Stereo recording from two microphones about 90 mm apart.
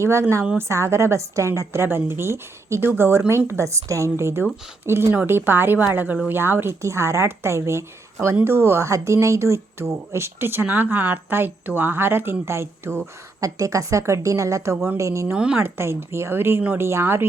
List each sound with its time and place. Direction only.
0.0 s a woman's voice: 30° right (ahead or behind)
15.3 s a woman's voice: 10° right (ahead or behind)
15.6 s speech: 25° right (ahead or behind)